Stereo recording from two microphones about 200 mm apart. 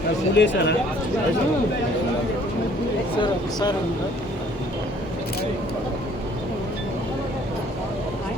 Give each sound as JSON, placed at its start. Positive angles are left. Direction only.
{"t": 0.3, "sound": "speech", "side_deg": 60}
{"t": 3.2, "sound": "speech", "side_deg": 20}